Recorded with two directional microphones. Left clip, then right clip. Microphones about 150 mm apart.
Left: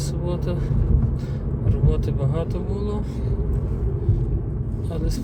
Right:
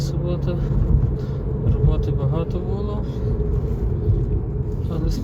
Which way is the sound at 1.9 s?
35° left (ahead or behind).